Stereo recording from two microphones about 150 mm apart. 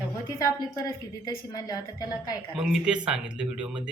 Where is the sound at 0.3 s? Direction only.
20° left (ahead or behind).